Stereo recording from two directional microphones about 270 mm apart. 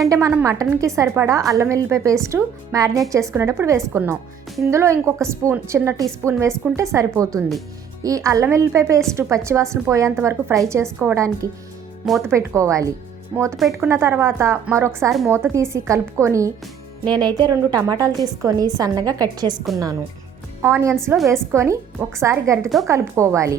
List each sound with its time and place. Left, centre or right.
0.0 s a woman's voice: centre
12.3 s a woman's voice: centre
21.2 s a woman's voice: centre
22.6 s a woman's voice: centre
22.9 s a woman's voice: centre